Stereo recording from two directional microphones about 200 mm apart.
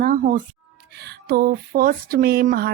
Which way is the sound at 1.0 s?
50° right (ahead or behind).